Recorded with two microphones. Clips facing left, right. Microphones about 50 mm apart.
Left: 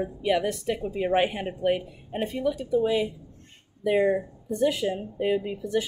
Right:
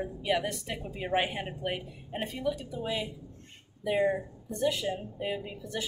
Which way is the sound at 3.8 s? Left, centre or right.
Left.